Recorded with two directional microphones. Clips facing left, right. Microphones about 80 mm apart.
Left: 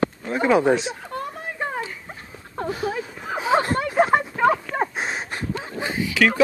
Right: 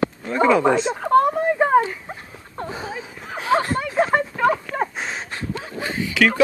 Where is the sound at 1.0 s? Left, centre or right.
Right.